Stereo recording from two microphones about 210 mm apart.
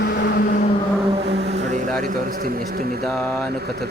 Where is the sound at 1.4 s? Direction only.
35° right (ahead or behind).